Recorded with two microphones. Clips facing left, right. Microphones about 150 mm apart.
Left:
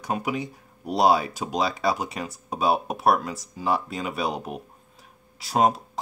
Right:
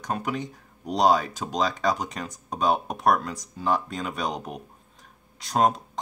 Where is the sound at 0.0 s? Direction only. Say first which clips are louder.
Left 2 dB; 10° left (ahead or behind).